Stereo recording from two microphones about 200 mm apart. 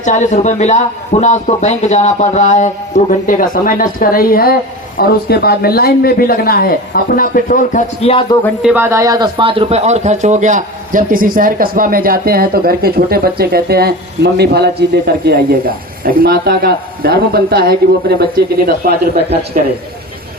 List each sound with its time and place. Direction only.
0.0 s a man's voice: 40° left (ahead or behind)
8.6 s speech: 10° right (ahead or behind); by 18.7 s 50° right (ahead or behind)